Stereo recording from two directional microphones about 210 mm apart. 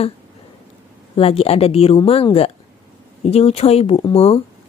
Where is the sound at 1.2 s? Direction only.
30° left (ahead or behind).